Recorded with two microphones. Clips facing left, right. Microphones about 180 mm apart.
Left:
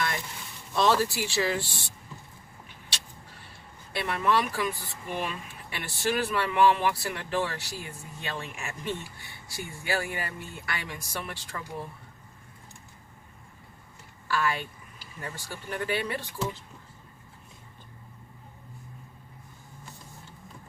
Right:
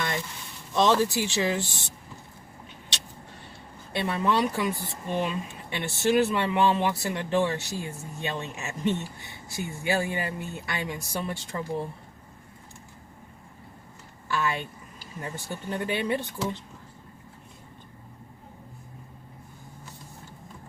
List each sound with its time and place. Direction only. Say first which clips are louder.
0.8 s speech: right 2 dB; 20° right (ahead or behind)
3.9 s speech: right 1 dB; 20° right (ahead or behind)
14.3 s speech: even; 20° right (ahead or behind)